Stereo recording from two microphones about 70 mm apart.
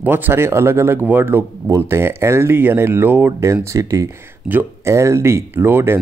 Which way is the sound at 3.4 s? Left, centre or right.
Right.